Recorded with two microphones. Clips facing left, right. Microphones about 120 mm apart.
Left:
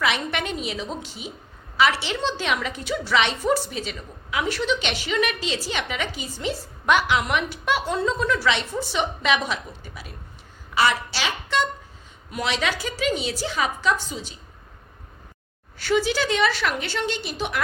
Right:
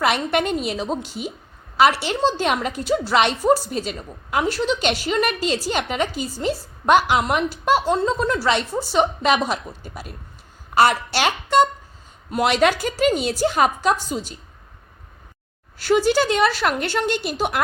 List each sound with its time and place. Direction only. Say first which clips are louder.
0.0 s a woman's voice: right 5 dB; 45° right (ahead or behind)
15.8 s a woman's voice: right 5 dB; 45° right (ahead or behind)